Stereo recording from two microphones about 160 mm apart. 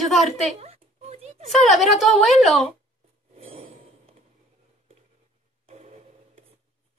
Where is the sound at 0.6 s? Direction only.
40° right (ahead or behind).